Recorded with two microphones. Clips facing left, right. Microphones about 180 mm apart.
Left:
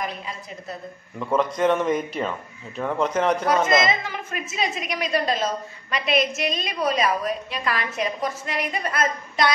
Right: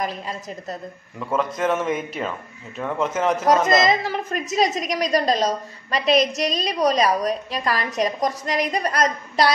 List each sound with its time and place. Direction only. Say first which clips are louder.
0.0 s a woman's voice: right 4 dB; 40° right (ahead or behind)
1.2 s a man's voice: left 2 dB; centre (ahead or behind)
3.8 s a woman's voice: right 4 dB; 40° right (ahead or behind)